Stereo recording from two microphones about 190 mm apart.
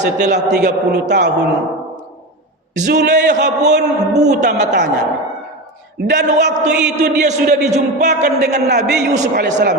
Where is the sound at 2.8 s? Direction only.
60° right (ahead or behind).